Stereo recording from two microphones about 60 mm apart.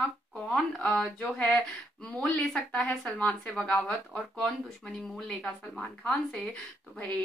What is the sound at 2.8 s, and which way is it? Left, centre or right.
Speech, centre.